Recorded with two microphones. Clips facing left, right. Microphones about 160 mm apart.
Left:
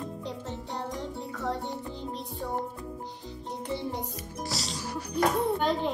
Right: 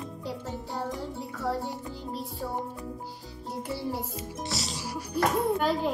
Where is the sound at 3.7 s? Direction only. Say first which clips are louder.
Even; 5° right (ahead or behind).